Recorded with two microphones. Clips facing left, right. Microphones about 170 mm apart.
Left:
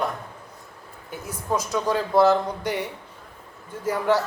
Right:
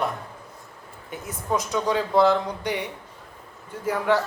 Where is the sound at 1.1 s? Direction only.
Centre (ahead or behind).